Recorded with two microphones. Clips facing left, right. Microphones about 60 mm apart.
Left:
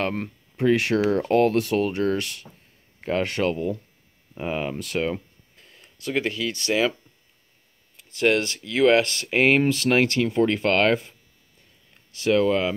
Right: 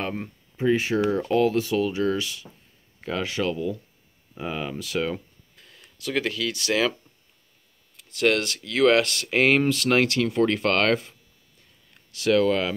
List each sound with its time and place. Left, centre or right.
0.0 s speech: left
1.2 s speech: left
5.1 s a sound: left
8.0 s speech: left